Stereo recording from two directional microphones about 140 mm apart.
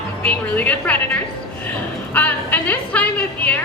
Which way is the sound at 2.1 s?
10° left (ahead or behind).